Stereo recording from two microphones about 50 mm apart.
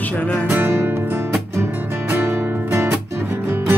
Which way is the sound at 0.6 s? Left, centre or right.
Right.